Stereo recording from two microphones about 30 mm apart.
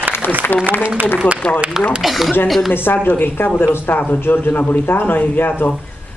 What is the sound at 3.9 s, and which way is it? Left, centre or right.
Speech, left.